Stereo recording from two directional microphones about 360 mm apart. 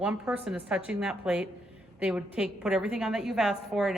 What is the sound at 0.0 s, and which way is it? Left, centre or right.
A woman's voice, centre.